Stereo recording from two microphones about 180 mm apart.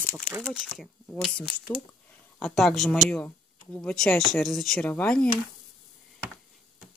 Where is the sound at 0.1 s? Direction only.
15° right (ahead or behind).